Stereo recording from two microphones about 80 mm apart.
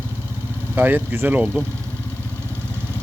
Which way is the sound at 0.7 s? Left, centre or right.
Right.